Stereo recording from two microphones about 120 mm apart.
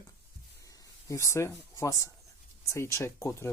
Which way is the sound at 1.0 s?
25° left (ahead or behind).